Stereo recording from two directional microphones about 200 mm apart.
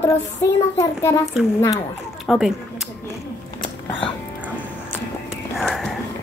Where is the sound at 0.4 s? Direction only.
15° left (ahead or behind).